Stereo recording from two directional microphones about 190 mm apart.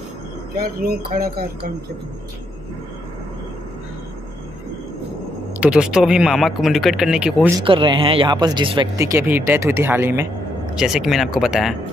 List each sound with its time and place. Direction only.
0.6 s speech: 50° right (ahead or behind)
5.6 s speech: 5° right (ahead or behind)
7.6 s speech: 25° right (ahead or behind); by 11.7 s centre (ahead or behind)